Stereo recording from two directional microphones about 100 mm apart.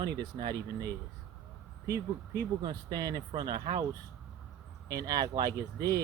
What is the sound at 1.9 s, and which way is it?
Speech, 40° right (ahead or behind).